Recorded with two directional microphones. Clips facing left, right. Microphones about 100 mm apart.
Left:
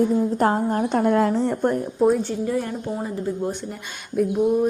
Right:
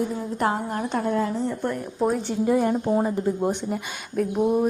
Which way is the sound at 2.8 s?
40° right (ahead or behind).